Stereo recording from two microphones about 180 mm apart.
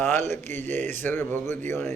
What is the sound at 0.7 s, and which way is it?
Mantra, 10° left (ahead or behind).